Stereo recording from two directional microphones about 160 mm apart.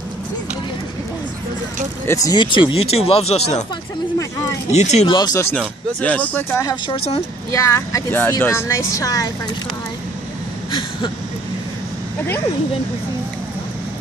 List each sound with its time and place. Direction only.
2.0 s speech: 25° left (ahead or behind)
4.6 s speech: 45° left (ahead or behind)
5.0 s speech: 25° left (ahead or behind)
10.7 s a sound: 30° left (ahead or behind)